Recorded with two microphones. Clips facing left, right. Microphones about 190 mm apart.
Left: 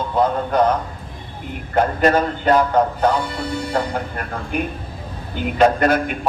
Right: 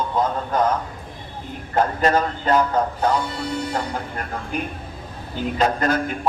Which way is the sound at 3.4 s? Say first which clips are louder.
Left 3 dB; 60° left (ahead or behind).